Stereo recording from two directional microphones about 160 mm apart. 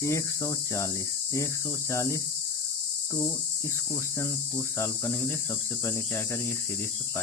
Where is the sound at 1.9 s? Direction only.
20° left (ahead or behind).